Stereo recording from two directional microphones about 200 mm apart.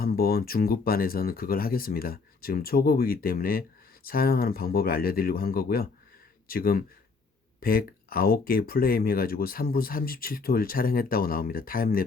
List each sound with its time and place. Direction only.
0.0 s speech: 50° left (ahead or behind)